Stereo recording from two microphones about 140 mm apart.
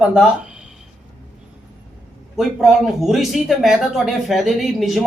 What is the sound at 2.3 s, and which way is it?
A man's voice, centre (ahead or behind).